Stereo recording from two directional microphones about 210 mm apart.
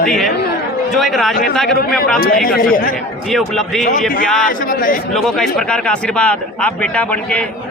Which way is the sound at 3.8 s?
40° left (ahead or behind).